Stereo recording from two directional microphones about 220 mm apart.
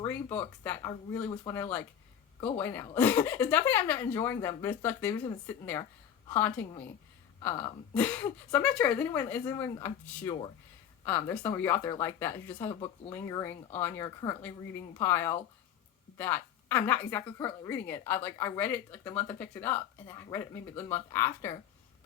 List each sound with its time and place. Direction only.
0.0 s a woman's voice: 10° left (ahead or behind)